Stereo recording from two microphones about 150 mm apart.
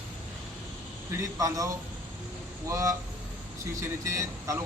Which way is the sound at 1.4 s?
25° right (ahead or behind).